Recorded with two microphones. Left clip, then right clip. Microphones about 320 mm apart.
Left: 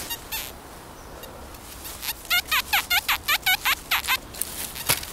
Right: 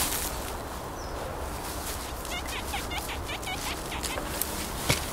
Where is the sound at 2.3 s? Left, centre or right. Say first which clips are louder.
Left 13 dB; left.